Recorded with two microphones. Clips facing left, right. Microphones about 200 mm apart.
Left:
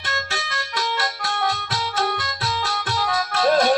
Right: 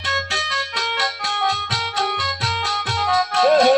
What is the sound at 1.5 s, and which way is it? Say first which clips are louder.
Music: even; 20° right (ahead or behind).